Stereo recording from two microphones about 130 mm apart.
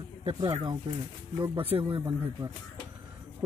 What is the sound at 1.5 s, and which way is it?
Speech, 50° right (ahead or behind).